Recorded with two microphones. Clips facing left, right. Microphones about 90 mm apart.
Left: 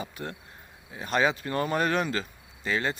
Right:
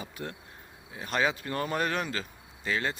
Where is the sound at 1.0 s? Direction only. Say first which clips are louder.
Left 3 dB; 15° left (ahead or behind).